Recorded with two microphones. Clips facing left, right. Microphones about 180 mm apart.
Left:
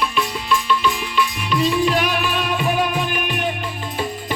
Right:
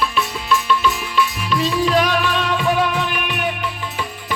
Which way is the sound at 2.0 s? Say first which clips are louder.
Right 2 dB; 10° left (ahead or behind).